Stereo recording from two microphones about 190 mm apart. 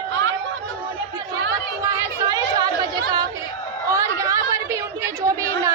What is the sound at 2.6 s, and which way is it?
Chatter, 20° right (ahead or behind).